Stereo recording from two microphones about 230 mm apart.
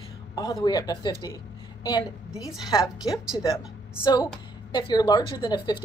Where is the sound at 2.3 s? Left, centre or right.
Centre.